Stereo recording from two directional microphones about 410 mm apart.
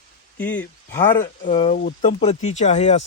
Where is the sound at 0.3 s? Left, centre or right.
Centre.